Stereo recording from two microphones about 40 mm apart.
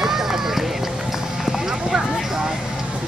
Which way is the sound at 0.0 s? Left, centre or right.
Centre.